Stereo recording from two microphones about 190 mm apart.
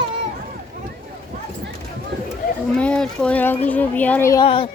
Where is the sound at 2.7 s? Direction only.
5° left (ahead or behind).